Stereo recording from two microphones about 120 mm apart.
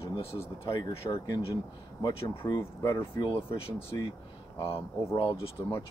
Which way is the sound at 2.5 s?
25° left (ahead or behind).